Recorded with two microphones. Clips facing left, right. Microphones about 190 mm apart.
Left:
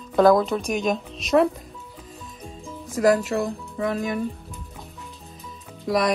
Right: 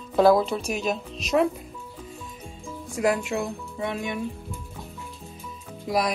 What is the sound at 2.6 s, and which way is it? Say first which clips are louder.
Music: left 3 dB; centre (ahead or behind).